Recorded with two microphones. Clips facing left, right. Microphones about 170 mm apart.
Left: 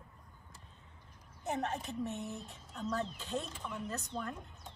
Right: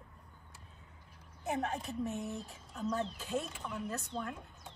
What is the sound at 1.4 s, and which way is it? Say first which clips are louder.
A woman's voice: right 1 dB; centre (ahead or behind).